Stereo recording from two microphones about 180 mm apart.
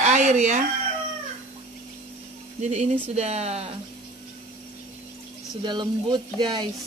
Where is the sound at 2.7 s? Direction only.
35° right (ahead or behind).